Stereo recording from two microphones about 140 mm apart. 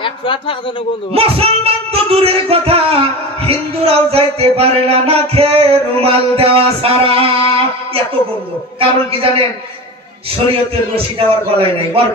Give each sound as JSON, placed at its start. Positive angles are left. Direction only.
{"t": 0.0, "sound": "a man's voice", "side_deg": 40}
{"t": 1.1, "sound": "music", "side_deg": -45}
{"t": 8.7, "sound": "a man's voice", "side_deg": -40}
{"t": 12.0, "sound": "music", "side_deg": -45}